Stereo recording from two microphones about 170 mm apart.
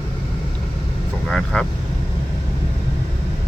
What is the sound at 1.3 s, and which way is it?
Speech, 5° left (ahead or behind).